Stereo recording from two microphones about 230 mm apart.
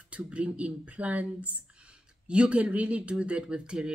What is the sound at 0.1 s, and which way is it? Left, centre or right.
Speech, centre.